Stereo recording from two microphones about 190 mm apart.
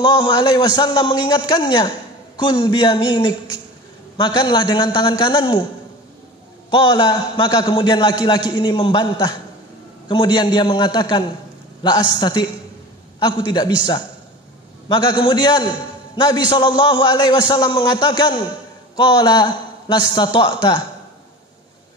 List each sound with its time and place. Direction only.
0.0 s a man's voice: 25° left (ahead or behind)
6.7 s a man's voice: 25° left (ahead or behind)
14.9 s a man's voice: 25° left (ahead or behind)